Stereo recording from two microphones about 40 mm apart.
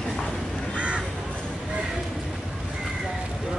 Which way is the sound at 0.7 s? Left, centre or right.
Right.